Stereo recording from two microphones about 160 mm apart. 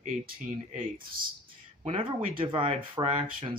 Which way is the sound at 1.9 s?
35° right (ahead or behind).